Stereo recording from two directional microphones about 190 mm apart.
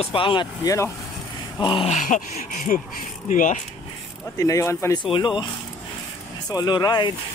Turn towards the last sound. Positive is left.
turn(degrees=25)  # may be behind; listen again after turning